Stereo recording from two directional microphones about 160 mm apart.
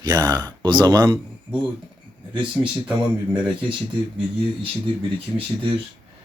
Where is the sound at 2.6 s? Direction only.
15° right (ahead or behind).